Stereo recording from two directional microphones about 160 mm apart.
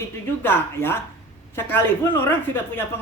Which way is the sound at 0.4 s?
15° left (ahead or behind).